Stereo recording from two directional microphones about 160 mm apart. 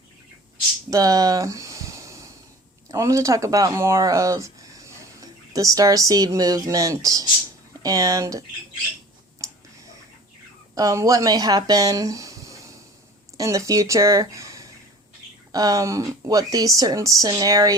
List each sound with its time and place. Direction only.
0.9 s a sound: 20° right (ahead or behind)
2.9 s speech: 20° right (ahead or behind)
10.8 s speech: 20° right (ahead or behind)